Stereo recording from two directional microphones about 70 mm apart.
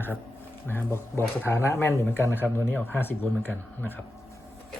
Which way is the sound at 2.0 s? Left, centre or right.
Left.